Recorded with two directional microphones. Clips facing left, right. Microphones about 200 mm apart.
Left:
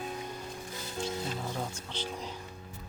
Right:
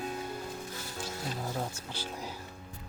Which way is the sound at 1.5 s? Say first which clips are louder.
Even; 10° right (ahead or behind).